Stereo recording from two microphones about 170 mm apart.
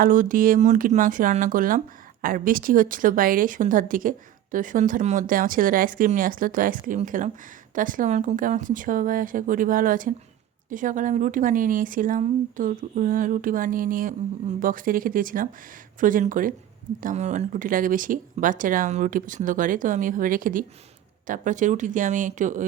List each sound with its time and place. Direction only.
0.0 s speech: 50° right (ahead or behind)